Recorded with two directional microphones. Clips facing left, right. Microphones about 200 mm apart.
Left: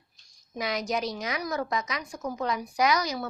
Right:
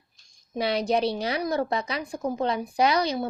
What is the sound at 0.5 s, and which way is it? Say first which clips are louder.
A woman's voice: right 5 dB; 30° right (ahead or behind).